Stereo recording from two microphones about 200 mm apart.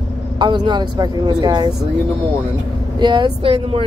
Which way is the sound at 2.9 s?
20° right (ahead or behind).